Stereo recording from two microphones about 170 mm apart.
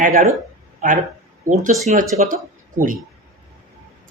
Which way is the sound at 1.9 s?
45° right (ahead or behind).